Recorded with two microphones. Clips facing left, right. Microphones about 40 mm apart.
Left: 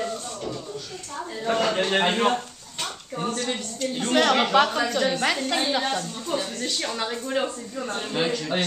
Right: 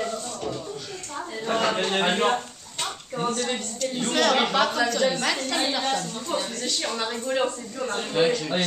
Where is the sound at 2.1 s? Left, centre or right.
Centre.